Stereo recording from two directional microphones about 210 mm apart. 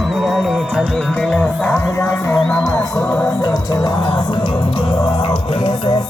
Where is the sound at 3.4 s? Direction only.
20° left (ahead or behind).